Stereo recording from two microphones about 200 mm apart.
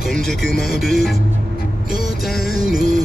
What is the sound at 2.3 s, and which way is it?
Music, 50° left (ahead or behind).